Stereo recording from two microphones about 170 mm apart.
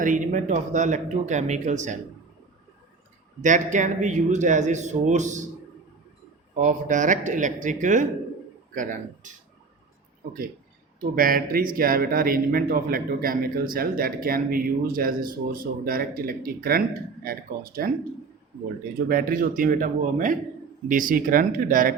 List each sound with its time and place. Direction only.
0.0 s a man's voice: 50° right (ahead or behind)
3.4 s a man's voice: 45° right (ahead or behind)
6.6 s a man's voice: 45° right (ahead or behind)
11.0 s speech: 55° right (ahead or behind)
19.0 s a man's voice: 55° right (ahead or behind)